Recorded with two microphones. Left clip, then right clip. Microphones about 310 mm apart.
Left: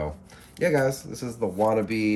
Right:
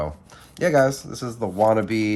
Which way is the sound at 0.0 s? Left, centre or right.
Centre.